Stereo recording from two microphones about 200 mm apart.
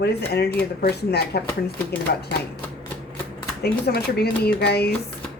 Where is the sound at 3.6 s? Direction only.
55° left (ahead or behind).